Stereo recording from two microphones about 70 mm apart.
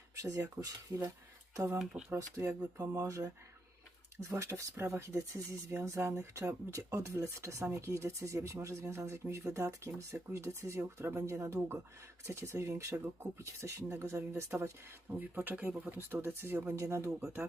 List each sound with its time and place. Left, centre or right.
0.2 s speech: right
1.8 s speech: centre
2.1 s speech: right
15.1 s speech: right
16.0 s speech: right
16.7 s speech: right